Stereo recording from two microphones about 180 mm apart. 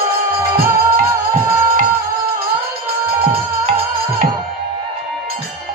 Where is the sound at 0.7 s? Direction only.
15° right (ahead or behind).